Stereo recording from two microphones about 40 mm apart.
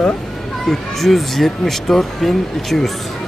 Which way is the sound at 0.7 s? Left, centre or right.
Centre.